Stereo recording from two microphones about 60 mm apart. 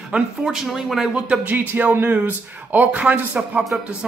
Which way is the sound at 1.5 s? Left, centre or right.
Right.